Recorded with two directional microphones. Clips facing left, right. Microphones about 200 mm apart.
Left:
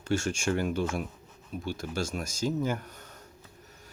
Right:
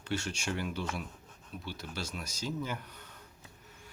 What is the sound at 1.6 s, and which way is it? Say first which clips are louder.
Speech: left 8 dB; 45° left (ahead or behind).